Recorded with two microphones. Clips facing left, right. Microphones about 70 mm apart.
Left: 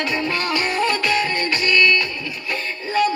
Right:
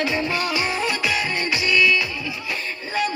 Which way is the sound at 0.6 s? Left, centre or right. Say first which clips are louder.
Left 3 dB; centre.